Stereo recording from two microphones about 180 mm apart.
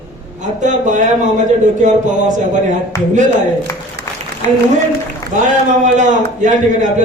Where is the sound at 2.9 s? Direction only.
15° left (ahead or behind).